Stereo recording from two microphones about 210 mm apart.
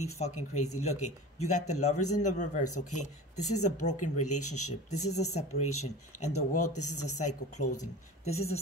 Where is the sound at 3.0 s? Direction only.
35° left (ahead or behind).